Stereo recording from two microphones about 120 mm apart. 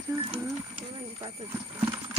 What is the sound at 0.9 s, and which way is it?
Speech, 50° right (ahead or behind).